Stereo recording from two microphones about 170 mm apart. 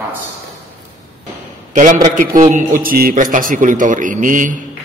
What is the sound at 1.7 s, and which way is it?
A man's voice, 45° right (ahead or behind).